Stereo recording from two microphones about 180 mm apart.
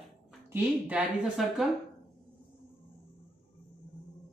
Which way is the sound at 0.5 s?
10° right (ahead or behind).